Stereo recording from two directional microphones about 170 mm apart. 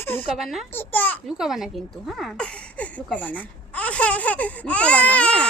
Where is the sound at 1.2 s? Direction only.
5° right (ahead or behind).